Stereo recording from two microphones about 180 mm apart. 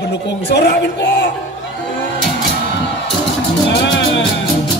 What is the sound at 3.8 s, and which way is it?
Music, 90° left.